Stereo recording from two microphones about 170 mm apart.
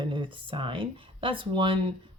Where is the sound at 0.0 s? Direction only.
30° right (ahead or behind).